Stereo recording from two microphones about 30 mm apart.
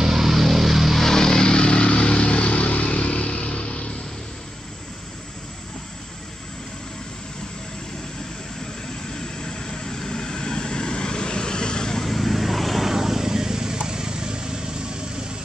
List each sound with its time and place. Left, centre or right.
0.0 s vehicle: centre
0.9 s vehicle: centre; by 3.9 s left
9.1 s vehicle: left
12.0 s vehicle: centre
12.9 s vehicle: centre; by 15.3 s right